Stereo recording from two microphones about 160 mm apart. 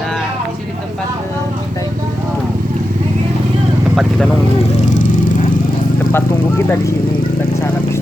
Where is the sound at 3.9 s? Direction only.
5° right (ahead or behind).